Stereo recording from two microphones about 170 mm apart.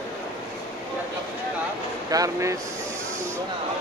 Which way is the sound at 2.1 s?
20° right (ahead or behind).